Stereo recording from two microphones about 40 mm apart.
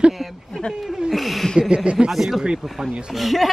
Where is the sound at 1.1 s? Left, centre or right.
Centre.